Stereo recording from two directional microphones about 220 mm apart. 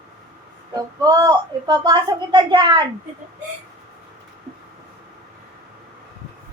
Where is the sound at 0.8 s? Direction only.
15° right (ahead or behind).